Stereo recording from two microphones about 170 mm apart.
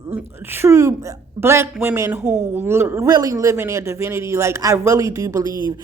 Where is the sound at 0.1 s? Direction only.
15° right (ahead or behind).